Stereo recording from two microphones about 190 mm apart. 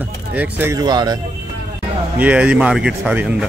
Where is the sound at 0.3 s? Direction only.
10° right (ahead or behind).